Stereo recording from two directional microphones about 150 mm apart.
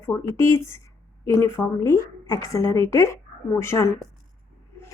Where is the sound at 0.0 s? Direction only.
20° left (ahead or behind).